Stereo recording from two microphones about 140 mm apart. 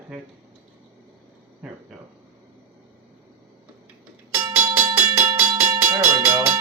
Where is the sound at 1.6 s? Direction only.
5° right (ahead or behind).